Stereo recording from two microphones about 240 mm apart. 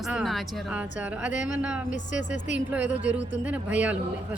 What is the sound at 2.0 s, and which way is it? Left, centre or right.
Speech, left.